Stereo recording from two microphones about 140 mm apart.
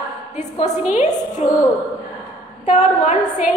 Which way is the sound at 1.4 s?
50° left (ahead or behind).